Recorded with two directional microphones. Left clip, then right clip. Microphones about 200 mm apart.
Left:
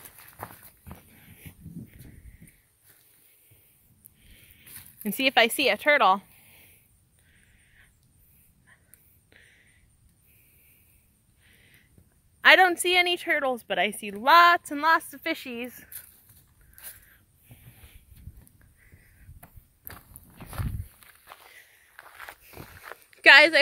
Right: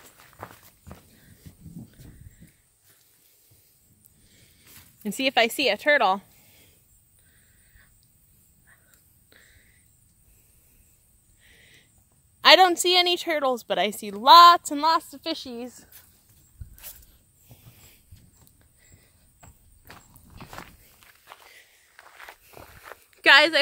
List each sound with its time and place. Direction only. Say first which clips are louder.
0.2 s dog: left 1 dB; 50° left (ahead or behind)
5.0 s a woman's voice: left 1 dB; 5° right (ahead or behind)
8.7 s whispering: even; 10° right (ahead or behind)
9.3 s a sound: even; 10° right (ahead or behind)
11.4 s a sound: right 4 dB; 20° right (ahead or behind)
12.4 s a woman's voice: right 2 dB; 20° right (ahead or behind)
15.0 s a woman's voice: left 1 dB; 15° left (ahead or behind)
15.4 s speech: left 1 dB; 5° right (ahead or behind)
19.4 s a sound: even; 50° left (ahead or behind)
23.2 s a woman's voice: left 1 dB; centre (ahead or behind)